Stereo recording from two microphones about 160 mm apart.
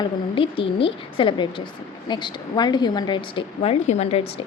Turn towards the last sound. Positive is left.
turn(degrees=40)  # may be behind; listen again after turning